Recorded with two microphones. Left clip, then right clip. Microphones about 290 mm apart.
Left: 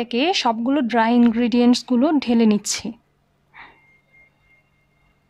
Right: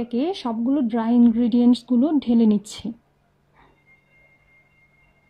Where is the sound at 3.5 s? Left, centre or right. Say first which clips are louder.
Left 13 dB; left.